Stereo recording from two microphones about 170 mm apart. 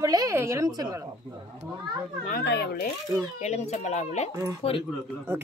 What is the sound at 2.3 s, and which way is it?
Speech, 80° left.